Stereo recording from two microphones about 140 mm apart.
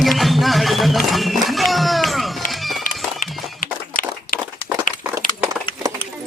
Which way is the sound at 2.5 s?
Centre (ahead or behind).